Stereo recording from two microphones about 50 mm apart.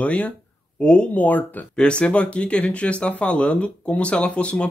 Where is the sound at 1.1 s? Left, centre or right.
Left.